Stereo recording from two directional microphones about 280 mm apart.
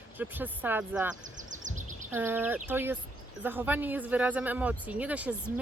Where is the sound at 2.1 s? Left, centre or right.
Centre.